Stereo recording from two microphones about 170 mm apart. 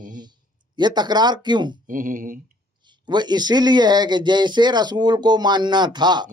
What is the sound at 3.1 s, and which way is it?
Speech, 25° right (ahead or behind).